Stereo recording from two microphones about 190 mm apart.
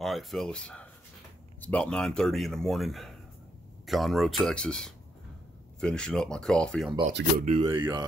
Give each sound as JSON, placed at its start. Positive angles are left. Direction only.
{"t": 0.0, "sound": "speech", "side_deg": 0}
{"t": 7.1, "sound": "speech", "side_deg": -60}
{"t": 7.4, "sound": "speech", "side_deg": -30}